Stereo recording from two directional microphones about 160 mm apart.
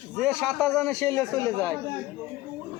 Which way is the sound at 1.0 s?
20° left (ahead or behind).